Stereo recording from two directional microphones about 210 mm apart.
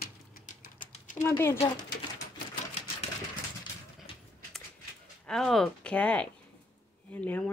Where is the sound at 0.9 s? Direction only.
35° left (ahead or behind).